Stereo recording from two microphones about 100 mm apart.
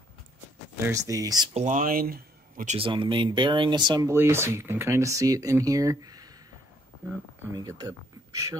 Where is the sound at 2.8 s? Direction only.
55° right (ahead or behind).